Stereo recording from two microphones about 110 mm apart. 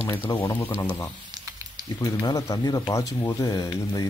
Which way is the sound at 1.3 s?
30° right (ahead or behind).